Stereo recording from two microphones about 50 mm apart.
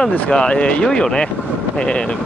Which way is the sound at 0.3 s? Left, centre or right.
Centre.